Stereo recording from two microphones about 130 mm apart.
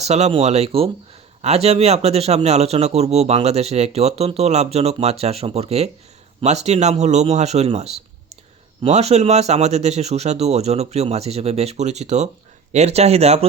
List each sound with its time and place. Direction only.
0.0 s a man's voice: 55° right (ahead or behind)